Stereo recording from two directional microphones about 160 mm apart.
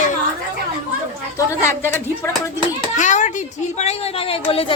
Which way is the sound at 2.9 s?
50° left (ahead or behind).